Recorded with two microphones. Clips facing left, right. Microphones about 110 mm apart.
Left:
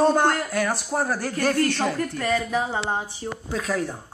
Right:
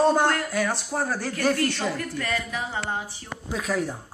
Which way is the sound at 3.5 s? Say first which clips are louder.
Even; 5° right (ahead or behind).